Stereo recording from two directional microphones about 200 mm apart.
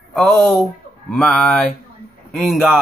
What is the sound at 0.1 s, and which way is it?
Speech, centre (ahead or behind).